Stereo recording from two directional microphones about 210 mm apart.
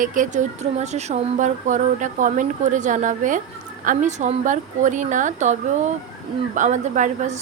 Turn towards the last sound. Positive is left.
turn(degrees=-35)  # may be behind; listen again after turning